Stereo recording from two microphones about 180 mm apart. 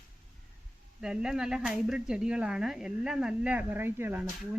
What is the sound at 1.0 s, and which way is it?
Speech, 5° right (ahead or behind).